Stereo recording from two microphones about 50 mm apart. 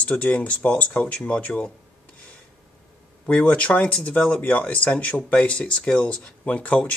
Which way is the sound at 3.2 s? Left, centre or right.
Left.